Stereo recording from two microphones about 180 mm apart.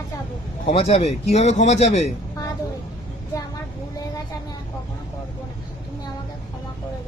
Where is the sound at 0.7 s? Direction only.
35° left (ahead or behind).